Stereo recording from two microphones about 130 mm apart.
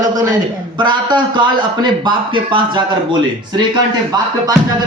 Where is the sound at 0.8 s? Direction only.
35° right (ahead or behind).